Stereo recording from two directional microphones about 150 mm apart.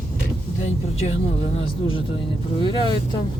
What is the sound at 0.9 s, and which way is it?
Speech, 45° left (ahead or behind).